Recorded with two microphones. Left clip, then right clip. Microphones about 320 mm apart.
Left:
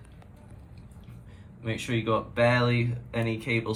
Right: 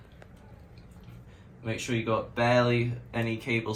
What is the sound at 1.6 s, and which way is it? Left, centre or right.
Speech, centre.